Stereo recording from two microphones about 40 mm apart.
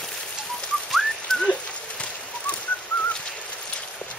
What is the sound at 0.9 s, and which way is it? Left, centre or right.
Whistling, centre.